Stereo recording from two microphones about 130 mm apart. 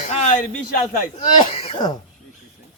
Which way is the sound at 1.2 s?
50° left (ahead or behind).